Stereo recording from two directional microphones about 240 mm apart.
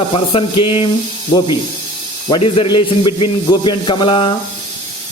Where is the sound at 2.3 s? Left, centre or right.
Left.